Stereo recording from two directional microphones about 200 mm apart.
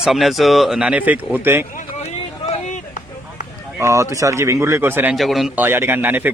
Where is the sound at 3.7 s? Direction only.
15° right (ahead or behind).